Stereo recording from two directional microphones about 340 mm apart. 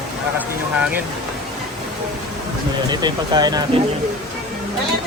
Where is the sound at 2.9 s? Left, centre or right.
Centre.